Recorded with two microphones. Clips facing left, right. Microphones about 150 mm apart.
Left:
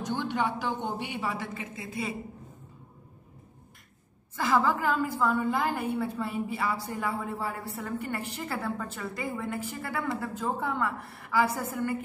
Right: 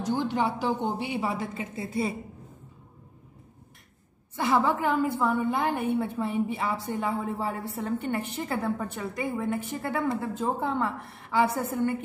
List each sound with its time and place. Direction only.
0.1 s speech: 15° right (ahead or behind)
1.5 s a woman's voice: 30° right (ahead or behind)
4.4 s a woman's voice: 20° right (ahead or behind)